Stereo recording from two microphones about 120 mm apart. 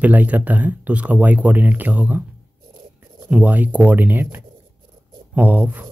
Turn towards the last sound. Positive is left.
turn(degrees=-15)  # may be behind; listen again after turning